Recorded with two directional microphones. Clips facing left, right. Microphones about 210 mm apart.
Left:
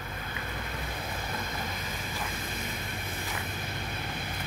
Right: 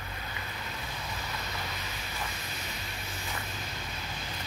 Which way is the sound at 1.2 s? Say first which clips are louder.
Left 3 dB; 50° left (ahead or behind).